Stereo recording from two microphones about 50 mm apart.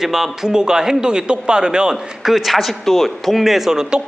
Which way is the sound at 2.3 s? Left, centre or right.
Centre.